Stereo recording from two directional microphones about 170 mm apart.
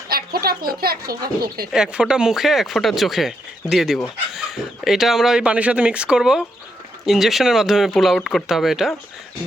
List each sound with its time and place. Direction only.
0.1 s speech: 65° right (ahead or behind)
1.7 s speech: 5° right (ahead or behind)